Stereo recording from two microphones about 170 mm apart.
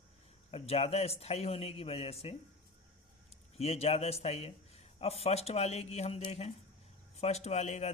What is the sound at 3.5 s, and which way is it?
Speech, 35° left (ahead or behind).